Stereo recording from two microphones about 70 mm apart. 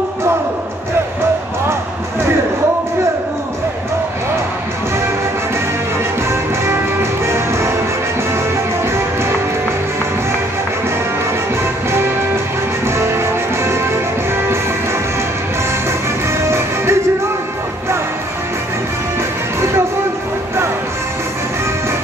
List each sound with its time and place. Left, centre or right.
6.6 s music: right
12.8 s music: right
16.4 s music: right